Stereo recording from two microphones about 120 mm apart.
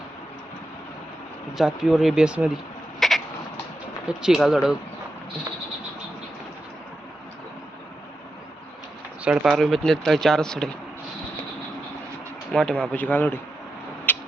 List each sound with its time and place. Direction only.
1.5 s speech: 5° right (ahead or behind)
3.0 s frog: centre (ahead or behind)
4.2 s speech: 5° right (ahead or behind)
9.2 s speech: 10° right (ahead or behind)
12.5 s speech: 5° left (ahead or behind)
14.1 s a sound: 15° left (ahead or behind)